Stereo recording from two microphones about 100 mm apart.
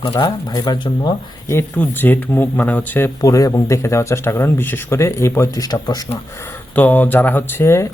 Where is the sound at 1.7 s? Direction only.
20° left (ahead or behind).